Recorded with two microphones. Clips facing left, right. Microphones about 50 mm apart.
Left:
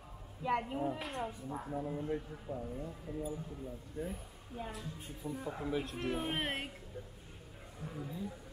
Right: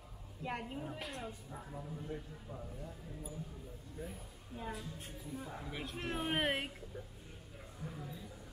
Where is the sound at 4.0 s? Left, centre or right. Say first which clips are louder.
Left 6 dB; left.